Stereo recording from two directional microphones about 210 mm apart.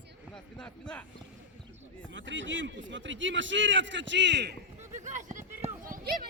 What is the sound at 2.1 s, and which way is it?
A man's voice, 60° right (ahead or behind).